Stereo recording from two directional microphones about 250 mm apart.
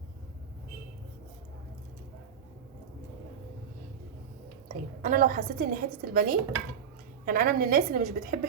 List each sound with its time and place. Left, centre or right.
5.0 s a woman's voice: right